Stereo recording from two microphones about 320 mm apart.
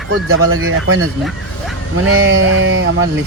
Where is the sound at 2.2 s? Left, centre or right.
Right.